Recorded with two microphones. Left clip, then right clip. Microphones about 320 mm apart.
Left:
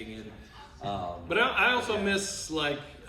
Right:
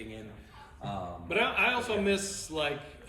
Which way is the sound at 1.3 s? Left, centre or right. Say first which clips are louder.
Left 3 dB; centre.